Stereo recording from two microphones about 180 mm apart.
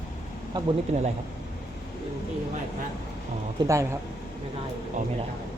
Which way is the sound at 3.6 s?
15° right (ahead or behind).